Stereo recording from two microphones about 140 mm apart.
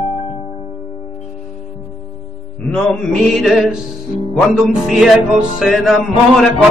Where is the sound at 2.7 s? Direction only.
5° left (ahead or behind).